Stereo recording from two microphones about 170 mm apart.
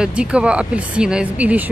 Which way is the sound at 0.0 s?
5° right (ahead or behind).